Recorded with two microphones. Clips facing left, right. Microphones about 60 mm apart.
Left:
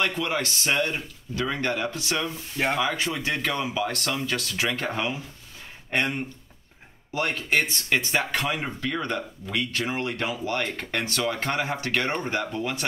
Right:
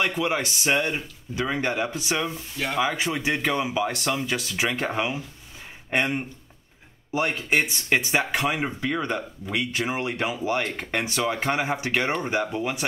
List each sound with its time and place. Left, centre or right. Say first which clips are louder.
0.0 s speech: right 2 dB; centre
2.5 s speech: left 5 dB; left
2.8 s speech: right 2 dB; centre